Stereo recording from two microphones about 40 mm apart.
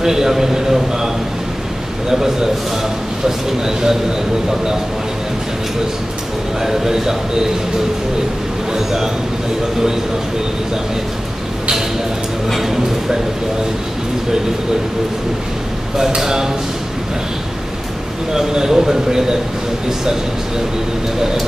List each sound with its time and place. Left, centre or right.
0.0 s a man's voice: centre
6.6 s speech: centre
8.7 s speech: centre
12.4 s speech: centre
16.2 s speech: centre
18.3 s speech: centre